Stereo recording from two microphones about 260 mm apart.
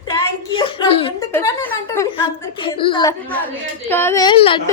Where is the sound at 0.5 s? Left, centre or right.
Centre.